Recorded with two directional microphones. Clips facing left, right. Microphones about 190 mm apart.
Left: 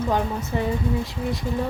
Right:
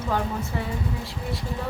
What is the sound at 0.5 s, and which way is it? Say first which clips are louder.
Speech: left 9 dB; 20° left (ahead or behind).